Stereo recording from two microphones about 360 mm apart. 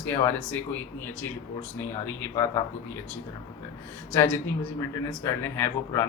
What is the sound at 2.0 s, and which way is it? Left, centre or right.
Speech, centre.